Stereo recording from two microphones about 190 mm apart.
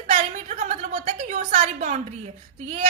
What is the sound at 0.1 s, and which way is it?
A woman's voice, 35° right (ahead or behind).